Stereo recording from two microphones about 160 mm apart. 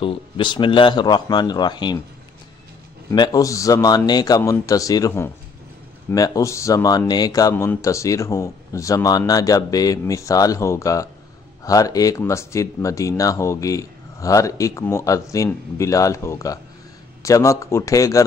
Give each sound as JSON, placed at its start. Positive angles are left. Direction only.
{"t": 0.0, "sound": "a man's voice", "side_deg": 30}
{"t": 3.1, "sound": "a man's voice", "side_deg": 20}